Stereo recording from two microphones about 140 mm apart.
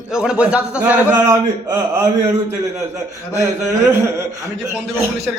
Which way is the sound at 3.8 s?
20° right (ahead or behind).